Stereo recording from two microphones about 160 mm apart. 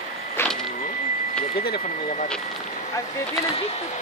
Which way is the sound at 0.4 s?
15° left (ahead or behind).